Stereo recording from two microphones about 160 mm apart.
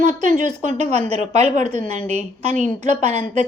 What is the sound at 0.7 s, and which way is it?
A woman's voice, 45° right (ahead or behind).